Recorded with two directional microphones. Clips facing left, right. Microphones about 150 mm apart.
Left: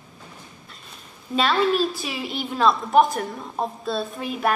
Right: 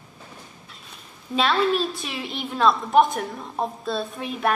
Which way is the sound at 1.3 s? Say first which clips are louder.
Left 1 dB; centre (ahead or behind).